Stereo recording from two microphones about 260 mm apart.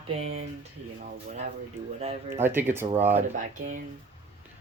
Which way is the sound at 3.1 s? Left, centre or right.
Right.